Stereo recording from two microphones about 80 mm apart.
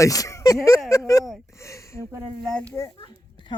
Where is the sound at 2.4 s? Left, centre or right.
Centre.